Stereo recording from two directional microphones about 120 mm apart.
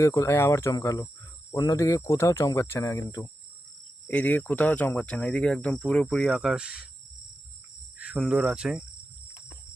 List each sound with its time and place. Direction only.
0.0 s speech: 25° left (ahead or behind)
4.1 s speech: 15° left (ahead or behind); by 6.8 s 5° right (ahead or behind)
7.9 s cricket: 10° right (ahead or behind)
8.2 s speech: 5° right (ahead or behind)